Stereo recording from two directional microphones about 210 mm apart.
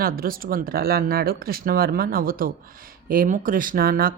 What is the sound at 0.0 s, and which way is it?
Speech, 45° right (ahead or behind).